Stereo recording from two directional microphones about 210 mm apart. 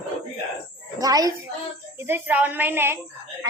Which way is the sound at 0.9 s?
15° right (ahead or behind).